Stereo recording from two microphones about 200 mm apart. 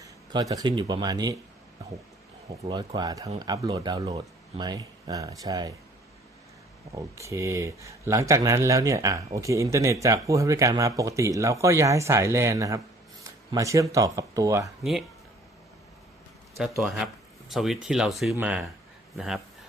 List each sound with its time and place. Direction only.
0.0 s speech: 15° right (ahead or behind)
2.5 s speech: 20° right (ahead or behind)
6.9 s speech: 15° right (ahead or behind)
16.8 s speech: centre (ahead or behind)